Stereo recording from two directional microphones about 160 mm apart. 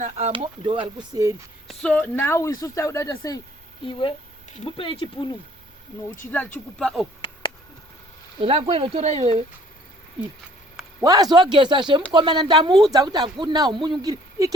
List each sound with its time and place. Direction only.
0.0 s speech: 45° right (ahead or behind)
0.3 s speech: 30° right (ahead or behind)
1.6 s speech: 5° left (ahead or behind); by 3.4 s 25° left (ahead or behind)
4.5 s speech: 35° left (ahead or behind)
6.2 s speech: 10° left (ahead or behind)
8.4 s speech: 35° right (ahead or behind)
11.0 s speech: 25° right (ahead or behind)